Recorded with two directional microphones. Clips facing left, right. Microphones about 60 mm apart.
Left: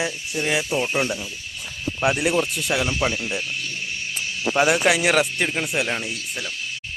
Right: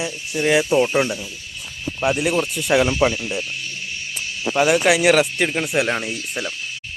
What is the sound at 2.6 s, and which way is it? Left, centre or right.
Speech, right.